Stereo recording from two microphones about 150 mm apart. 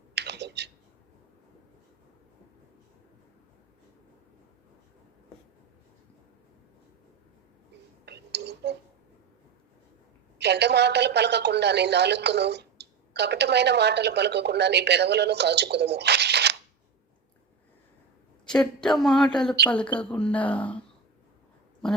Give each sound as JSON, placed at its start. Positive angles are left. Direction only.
{"t": 0.1, "sound": "clicking", "side_deg": -90}
{"t": 8.0, "sound": "whispering", "side_deg": -90}
{"t": 10.4, "sound": "a woman's voice", "side_deg": -90}
{"t": 18.4, "sound": "speech", "side_deg": 5}